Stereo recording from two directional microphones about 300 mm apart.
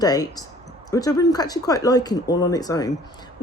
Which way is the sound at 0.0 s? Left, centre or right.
Centre.